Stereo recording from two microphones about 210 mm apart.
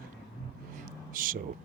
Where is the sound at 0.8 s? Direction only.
40° right (ahead or behind).